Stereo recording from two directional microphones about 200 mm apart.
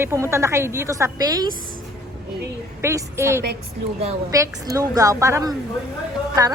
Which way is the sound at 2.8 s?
15° right (ahead or behind).